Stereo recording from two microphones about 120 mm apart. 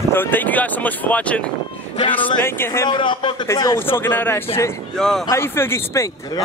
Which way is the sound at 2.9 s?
40° left (ahead or behind).